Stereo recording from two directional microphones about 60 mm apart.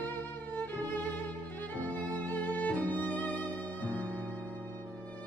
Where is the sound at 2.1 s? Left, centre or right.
Left.